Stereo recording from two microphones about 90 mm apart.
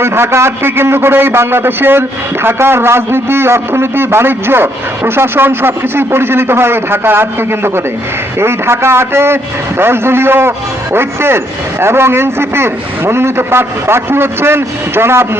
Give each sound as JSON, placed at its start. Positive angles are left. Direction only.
{"t": 0.0, "sound": "a man's voice", "side_deg": -30}